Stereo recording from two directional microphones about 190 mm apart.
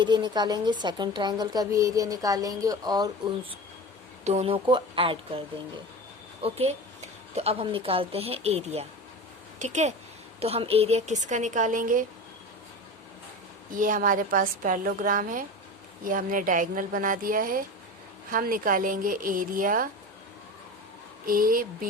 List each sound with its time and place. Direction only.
0.0 s speech: 25° right (ahead or behind)
4.2 s speech: 35° right (ahead or behind)
6.4 s a woman's voice: 30° right (ahead or behind)
13.7 s a woman's voice: 45° right (ahead or behind)
21.2 s a woman's voice: 50° right (ahead or behind)